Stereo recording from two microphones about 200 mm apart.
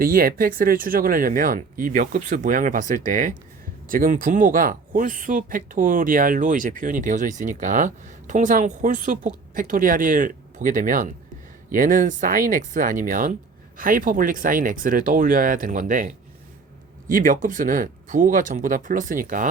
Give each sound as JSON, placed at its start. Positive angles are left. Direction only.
{"t": 0.0, "sound": "a woman's voice", "side_deg": -45}